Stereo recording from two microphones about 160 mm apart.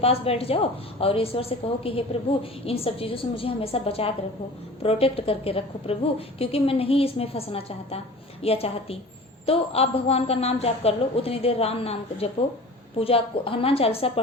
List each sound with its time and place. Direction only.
0.0 s a woman's voice: 40° left (ahead or behind)